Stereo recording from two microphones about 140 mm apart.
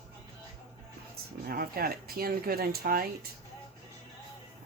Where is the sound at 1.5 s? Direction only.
90° right.